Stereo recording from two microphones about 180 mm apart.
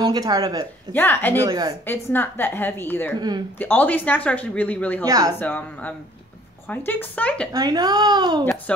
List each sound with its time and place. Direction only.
0.0 s a child's voice: 20° right (ahead or behind)
0.9 s speech: 10° left (ahead or behind)
1.4 s a child's voice: 20° right (ahead or behind)
1.9 s speech: 10° left (ahead or behind)
3.2 s a child's voice: 25° right (ahead or behind)
3.5 s speech: 10° left (ahead or behind)
5.0 s a child's voice: 20° right (ahead or behind)
5.4 s speech: 10° left (ahead or behind)
7.5 s a child's voice: 20° right (ahead or behind)
8.7 s speech: 5° left (ahead or behind)